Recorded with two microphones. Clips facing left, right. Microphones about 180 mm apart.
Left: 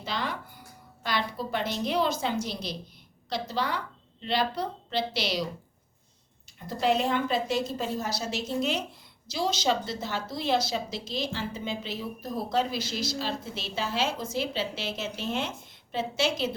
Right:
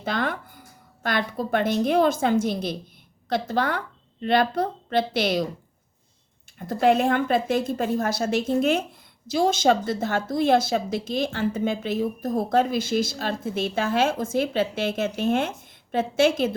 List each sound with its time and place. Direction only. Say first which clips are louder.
0.0 s a woman's voice: right 6 dB; 50° right (ahead or behind)
6.6 s speech: right 6 dB; 50° right (ahead or behind)